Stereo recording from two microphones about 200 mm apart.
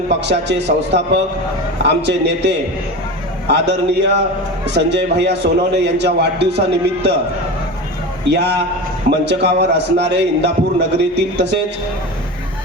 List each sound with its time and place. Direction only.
0.1 s a man's voice: 60° right (ahead or behind)
8.3 s a man's voice: 55° right (ahead or behind)